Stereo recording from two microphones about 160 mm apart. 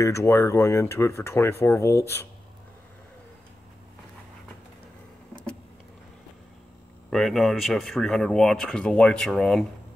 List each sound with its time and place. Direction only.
0.0 s speech: 20° left (ahead or behind)
5.3 s vehicle: 5° left (ahead or behind)
7.1 s speech: centre (ahead or behind)